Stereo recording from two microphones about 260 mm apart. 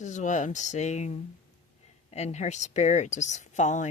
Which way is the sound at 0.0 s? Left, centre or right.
Left.